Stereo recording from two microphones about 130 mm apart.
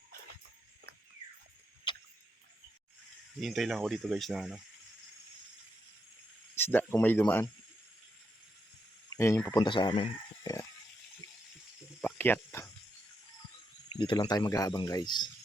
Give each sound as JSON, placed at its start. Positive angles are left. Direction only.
{"t": 1.9, "sound": "tick-tock", "side_deg": 35}
{"t": 3.4, "sound": "speech", "side_deg": 0}
{"t": 6.6, "sound": "speech", "side_deg": 15}
{"t": 9.0, "sound": "a sound", "side_deg": 20}
{"t": 9.6, "sound": "speech", "side_deg": 35}
{"t": 10.4, "sound": "dog", "side_deg": 25}
{"t": 11.9, "sound": "snake", "side_deg": 10}
{"t": 14.0, "sound": "speech", "side_deg": 40}